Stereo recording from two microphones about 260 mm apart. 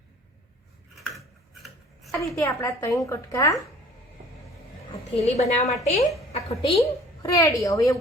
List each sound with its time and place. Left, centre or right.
2.2 s a woman's voice: centre
5.1 s a woman's voice: left